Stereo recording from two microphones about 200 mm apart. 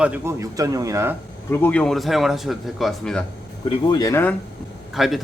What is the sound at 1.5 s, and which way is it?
A man's voice, 10° left (ahead or behind).